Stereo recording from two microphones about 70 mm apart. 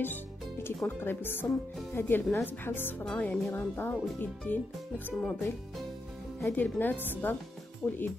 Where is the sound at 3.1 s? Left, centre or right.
Left.